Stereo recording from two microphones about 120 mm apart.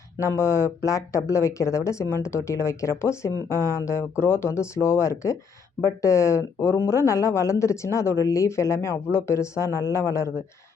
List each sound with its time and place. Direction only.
0.2 s speech: 20° left (ahead or behind)